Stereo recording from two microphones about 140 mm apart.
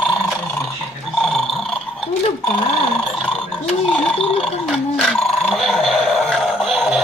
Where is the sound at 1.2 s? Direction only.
Centre (ahead or behind).